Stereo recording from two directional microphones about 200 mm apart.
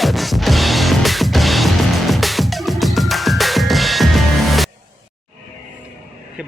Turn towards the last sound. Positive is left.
turn(degrees=0)  # may be behind; listen again after turning